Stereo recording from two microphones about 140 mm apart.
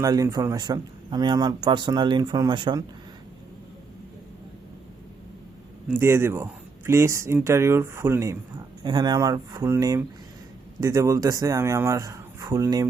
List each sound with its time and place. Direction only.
0.0 s speech: 25° right (ahead or behind)
5.9 s speech: 15° right (ahead or behind)
8.8 s speech: 30° right (ahead or behind)